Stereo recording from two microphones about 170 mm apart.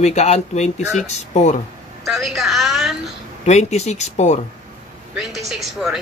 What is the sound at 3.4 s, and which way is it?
Speech, 40° left (ahead or behind).